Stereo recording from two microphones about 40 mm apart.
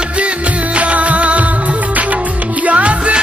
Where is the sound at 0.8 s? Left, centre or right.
Right.